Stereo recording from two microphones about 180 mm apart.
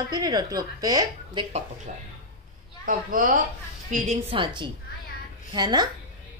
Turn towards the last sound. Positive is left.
turn(degrees=-25)  # may be behind; listen again after turning